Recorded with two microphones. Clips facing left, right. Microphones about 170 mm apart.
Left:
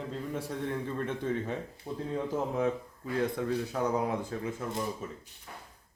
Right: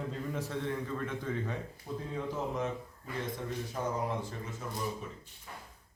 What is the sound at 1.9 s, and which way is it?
Speech, 50° left (ahead or behind).